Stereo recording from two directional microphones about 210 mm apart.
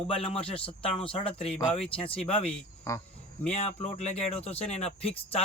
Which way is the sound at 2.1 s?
25° left (ahead or behind).